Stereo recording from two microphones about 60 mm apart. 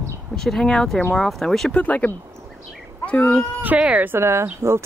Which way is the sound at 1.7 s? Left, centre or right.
Left.